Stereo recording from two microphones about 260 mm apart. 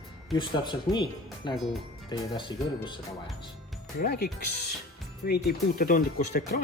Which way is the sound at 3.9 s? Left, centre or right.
Left.